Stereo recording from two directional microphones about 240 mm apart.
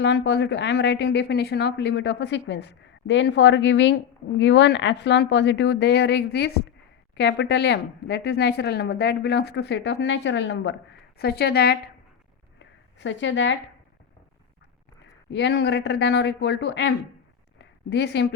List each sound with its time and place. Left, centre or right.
0.0 s speech: left
12.5 s a sound: left
15.3 s speech: left